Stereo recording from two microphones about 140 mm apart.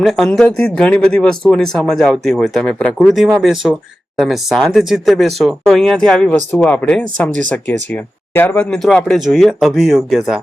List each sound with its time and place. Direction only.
0.0 s speech: centre (ahead or behind)